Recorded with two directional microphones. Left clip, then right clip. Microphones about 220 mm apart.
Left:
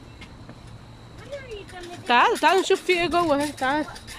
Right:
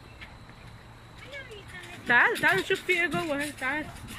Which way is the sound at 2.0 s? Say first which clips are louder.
Left 4 dB; 15° left (ahead or behind).